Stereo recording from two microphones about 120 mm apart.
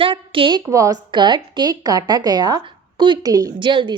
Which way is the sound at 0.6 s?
30° right (ahead or behind).